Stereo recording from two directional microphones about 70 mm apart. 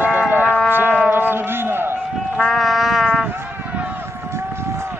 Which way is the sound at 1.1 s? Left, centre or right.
Right.